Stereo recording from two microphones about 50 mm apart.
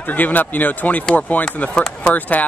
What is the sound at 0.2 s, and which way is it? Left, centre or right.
Speech, left.